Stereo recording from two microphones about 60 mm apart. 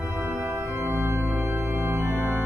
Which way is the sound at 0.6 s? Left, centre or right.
Right.